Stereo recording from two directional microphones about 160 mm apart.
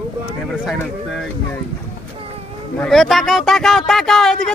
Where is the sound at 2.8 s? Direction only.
Centre (ahead or behind).